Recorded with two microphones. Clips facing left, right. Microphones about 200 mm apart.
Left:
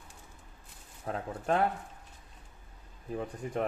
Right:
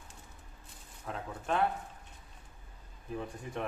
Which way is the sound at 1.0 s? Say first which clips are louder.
Left 5 dB; 40° left (ahead or behind).